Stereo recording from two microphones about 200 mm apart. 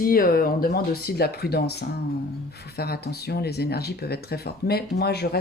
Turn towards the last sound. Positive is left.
turn(degrees=50)  # may be behind; listen again after turning